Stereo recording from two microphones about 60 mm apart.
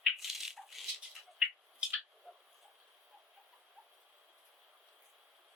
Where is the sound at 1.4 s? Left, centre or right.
Centre.